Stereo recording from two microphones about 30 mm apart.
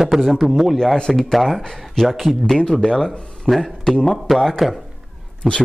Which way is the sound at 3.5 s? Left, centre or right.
Centre.